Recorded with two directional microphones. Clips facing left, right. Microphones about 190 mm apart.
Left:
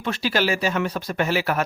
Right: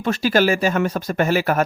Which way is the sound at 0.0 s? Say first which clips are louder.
Right 5 dB; 45° right (ahead or behind).